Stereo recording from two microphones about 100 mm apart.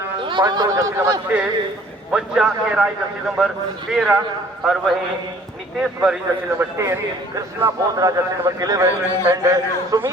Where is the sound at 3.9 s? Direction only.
5° right (ahead or behind).